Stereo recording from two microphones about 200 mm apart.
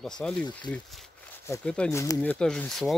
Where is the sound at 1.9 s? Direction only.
15° left (ahead or behind).